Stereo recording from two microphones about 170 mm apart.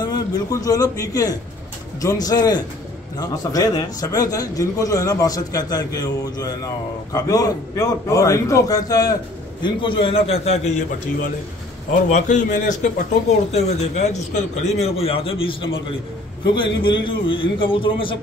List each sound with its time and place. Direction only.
0.0 s a man's voice: 20° left (ahead or behind)
17.0 s a man's voice: 30° left (ahead or behind)